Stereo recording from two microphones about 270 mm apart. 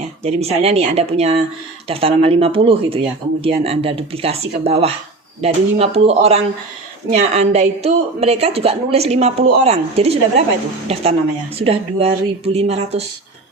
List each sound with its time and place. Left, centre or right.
0.2 s a woman's voice: right